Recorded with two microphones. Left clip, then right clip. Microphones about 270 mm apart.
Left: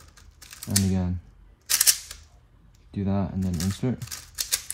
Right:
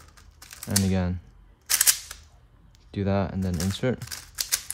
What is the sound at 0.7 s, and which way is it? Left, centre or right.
Speech, left.